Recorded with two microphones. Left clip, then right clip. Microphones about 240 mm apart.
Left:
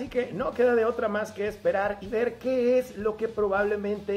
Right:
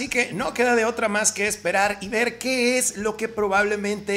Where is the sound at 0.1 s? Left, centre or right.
Right.